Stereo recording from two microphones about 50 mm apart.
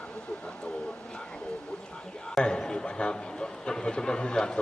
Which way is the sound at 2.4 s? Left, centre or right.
Centre.